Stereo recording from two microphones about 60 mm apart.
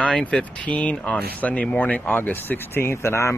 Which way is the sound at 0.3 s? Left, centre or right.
Centre.